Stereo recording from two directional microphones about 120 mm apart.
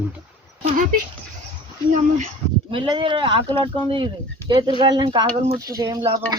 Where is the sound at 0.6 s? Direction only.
90° right.